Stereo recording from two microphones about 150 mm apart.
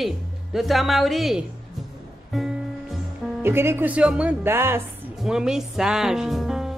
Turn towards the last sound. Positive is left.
turn(degrees=0)  # may be behind; listen again after turning